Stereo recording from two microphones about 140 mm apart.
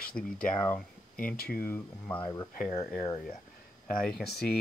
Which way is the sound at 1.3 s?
90° left.